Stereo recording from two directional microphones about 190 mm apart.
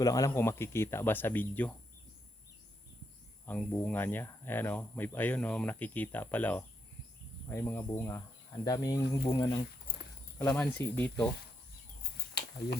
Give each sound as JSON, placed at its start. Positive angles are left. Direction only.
{"t": 0.0, "sound": "speech", "side_deg": 20}
{"t": 3.4, "sound": "speech", "side_deg": 10}
{"t": 10.3, "sound": "speech", "side_deg": 5}